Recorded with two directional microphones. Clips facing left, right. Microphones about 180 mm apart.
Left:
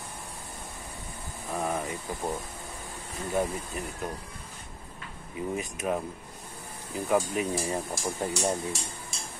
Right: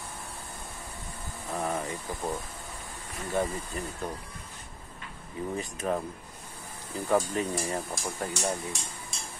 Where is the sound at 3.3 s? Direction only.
10° left (ahead or behind).